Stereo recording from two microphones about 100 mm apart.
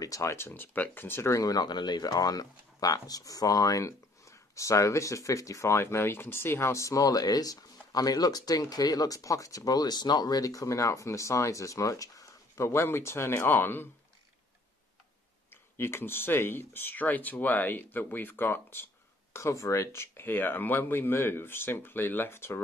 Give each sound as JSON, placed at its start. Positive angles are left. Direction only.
{"t": 0.0, "sound": "speech", "side_deg": 30}
{"t": 15.5, "sound": "speech", "side_deg": 25}